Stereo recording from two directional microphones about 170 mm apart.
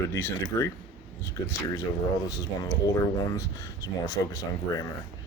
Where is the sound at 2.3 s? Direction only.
20° left (ahead or behind).